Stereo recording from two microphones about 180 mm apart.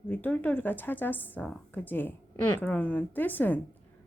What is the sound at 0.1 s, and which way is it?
Speech, 10° left (ahead or behind).